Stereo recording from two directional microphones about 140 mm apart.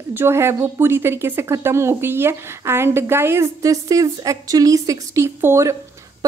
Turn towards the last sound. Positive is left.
turn(degrees=-20)  # may be behind; listen again after turning